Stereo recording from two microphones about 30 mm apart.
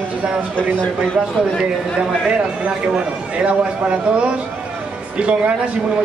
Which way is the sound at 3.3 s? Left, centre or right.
Right.